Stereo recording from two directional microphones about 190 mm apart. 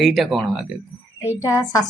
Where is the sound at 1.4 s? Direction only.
20° left (ahead or behind).